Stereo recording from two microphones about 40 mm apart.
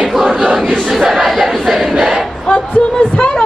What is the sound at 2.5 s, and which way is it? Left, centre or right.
Speech, left.